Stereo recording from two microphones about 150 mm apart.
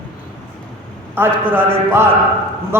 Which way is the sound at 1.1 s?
15° right (ahead or behind).